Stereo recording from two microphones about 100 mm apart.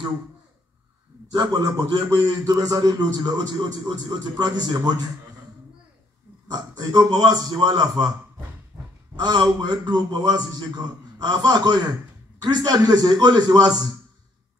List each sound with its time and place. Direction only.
1.3 s a man's voice: 45° right (ahead or behind)
6.4 s a man's voice: 40° right (ahead or behind)
8.7 s a sound: 30° right (ahead or behind)
9.1 s a man's voice: 45° right (ahead or behind)